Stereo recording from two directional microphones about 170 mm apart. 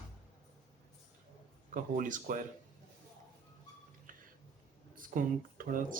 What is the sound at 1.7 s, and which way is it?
Speech, 50° right (ahead or behind).